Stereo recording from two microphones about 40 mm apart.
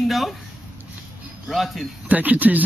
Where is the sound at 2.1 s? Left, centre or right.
Right.